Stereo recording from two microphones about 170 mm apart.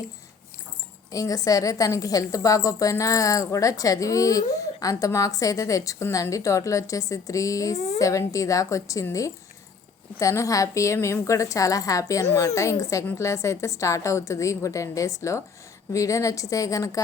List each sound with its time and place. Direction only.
1.1 s a woman's voice: 20° left (ahead or behind)